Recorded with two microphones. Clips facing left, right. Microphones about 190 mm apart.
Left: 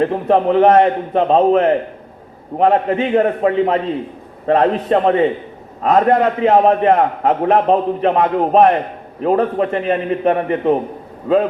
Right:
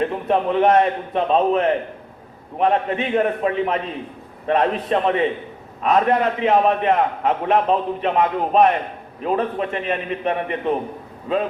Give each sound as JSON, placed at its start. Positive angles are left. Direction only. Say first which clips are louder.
{"t": 0.0, "sound": "a man's voice", "louder": "left 5 dB", "side_deg": 35}